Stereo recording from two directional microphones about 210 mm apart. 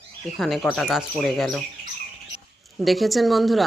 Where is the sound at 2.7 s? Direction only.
Centre (ahead or behind).